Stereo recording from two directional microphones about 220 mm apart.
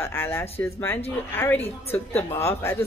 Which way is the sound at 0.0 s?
10° left (ahead or behind).